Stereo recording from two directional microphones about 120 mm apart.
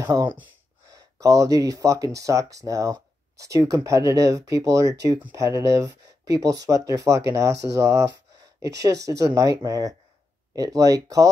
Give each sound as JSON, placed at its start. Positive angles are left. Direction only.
{"t": 0.0, "sound": "speech", "side_deg": -25}